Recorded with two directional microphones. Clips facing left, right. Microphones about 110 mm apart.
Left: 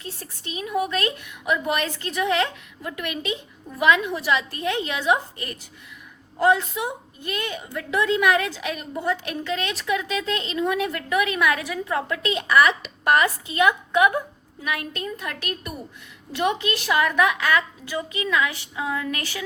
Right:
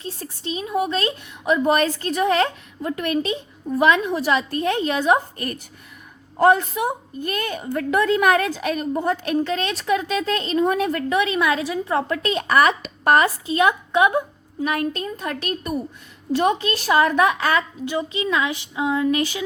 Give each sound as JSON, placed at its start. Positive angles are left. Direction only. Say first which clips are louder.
{"t": 0.0, "sound": "a woman's voice", "louder": "right 5 dB", "side_deg": -30}
{"t": 14.7, "sound": "a woman's voice", "louder": "right 3 dB", "side_deg": -40}